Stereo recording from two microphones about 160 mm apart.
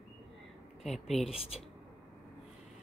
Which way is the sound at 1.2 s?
40° left (ahead or behind).